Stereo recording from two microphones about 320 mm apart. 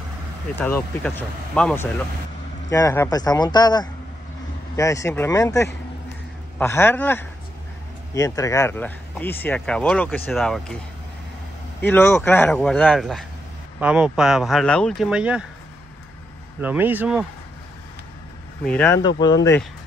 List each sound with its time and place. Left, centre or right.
0.6 s speech: centre
11.8 s speech: centre
16.6 s speech: centre
18.7 s speech: centre